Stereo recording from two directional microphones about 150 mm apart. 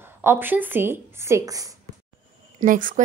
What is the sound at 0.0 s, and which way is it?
A woman's voice, 15° right (ahead or behind).